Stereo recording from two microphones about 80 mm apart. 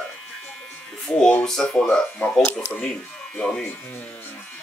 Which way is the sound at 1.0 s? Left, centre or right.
Centre.